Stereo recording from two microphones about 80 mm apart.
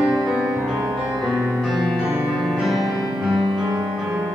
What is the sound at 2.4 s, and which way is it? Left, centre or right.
Music, centre.